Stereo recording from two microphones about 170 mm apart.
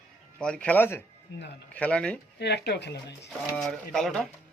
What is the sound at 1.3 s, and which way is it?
Speech, 90° left.